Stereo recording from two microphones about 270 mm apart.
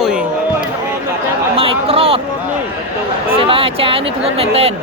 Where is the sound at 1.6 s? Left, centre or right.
Right.